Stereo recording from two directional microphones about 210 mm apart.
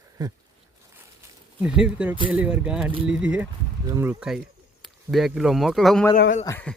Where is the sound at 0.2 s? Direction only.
20° right (ahead or behind).